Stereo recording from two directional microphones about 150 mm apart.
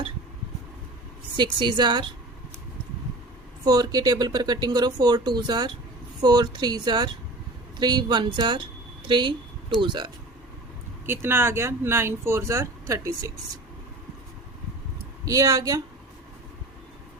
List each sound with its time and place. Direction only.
1.4 s speech: 30° right (ahead or behind)
3.6 s a woman's voice: 25° right (ahead or behind)
11.0 s speech: 15° right (ahead or behind)
15.2 s speech: 20° right (ahead or behind)